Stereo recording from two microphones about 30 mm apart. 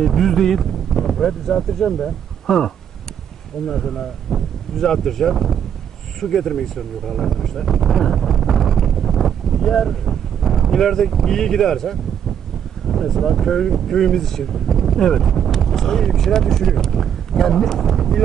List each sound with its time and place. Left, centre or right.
0.0 s speech: centre
7.3 s wind noise: centre
12.8 s a sound: centre
13.2 s speech: centre